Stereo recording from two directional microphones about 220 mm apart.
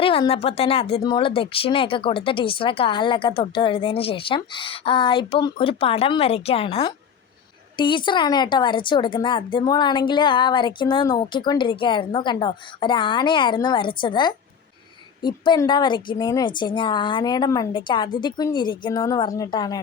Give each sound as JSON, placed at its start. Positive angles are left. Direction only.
{"t": 0.0, "sound": "speech", "side_deg": 25}